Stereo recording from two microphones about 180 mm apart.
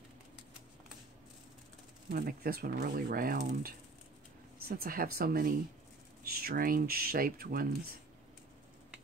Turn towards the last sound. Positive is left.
turn(degrees=-55)  # may be behind; listen again after turning